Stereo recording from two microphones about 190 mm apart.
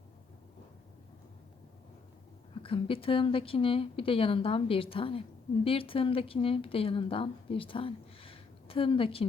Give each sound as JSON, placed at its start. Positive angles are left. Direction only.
{"t": 2.6, "sound": "a woman's voice", "side_deg": 30}